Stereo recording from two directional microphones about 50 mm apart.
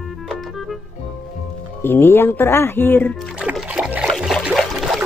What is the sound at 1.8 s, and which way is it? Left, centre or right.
Speech, left.